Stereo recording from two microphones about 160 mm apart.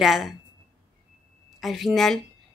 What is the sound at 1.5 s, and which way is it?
Speech, centre (ahead or behind).